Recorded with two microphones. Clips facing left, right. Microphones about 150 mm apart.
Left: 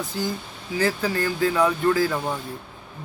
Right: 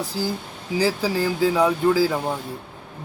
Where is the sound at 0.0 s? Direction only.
35° right (ahead or behind).